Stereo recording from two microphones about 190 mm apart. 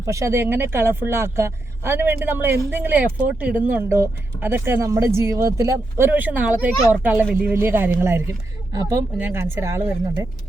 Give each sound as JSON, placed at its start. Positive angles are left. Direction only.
{"t": 0.0, "sound": "speech", "side_deg": -15}